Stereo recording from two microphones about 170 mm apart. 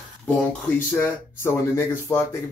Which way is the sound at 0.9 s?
10° left (ahead or behind).